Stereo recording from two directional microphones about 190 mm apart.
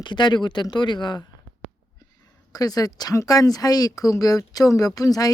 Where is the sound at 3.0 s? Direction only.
20° left (ahead or behind).